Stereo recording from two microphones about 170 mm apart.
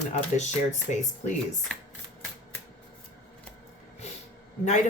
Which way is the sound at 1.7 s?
5° left (ahead or behind).